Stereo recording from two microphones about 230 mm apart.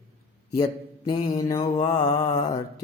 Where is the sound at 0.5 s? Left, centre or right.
Centre.